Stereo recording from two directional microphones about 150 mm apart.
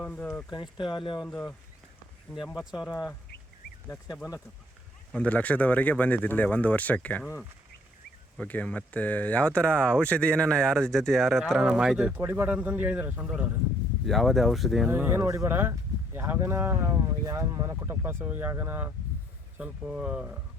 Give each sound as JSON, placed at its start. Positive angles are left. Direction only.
{"t": 0.0, "sound": "speech", "side_deg": 10}
{"t": 0.5, "sound": "speech", "side_deg": 30}
{"t": 1.3, "sound": "speech", "side_deg": 10}
{"t": 2.9, "sound": "speech", "side_deg": 20}
{"t": 14.8, "sound": "speech", "side_deg": -15}